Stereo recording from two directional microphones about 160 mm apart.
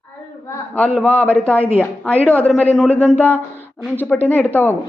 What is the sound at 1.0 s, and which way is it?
Speech, 10° left (ahead or behind).